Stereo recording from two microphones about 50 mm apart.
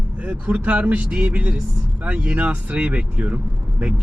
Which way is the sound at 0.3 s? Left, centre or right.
Right.